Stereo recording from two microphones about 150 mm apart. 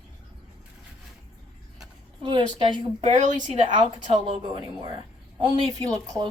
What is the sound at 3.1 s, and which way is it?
Speech, 55° right (ahead or behind).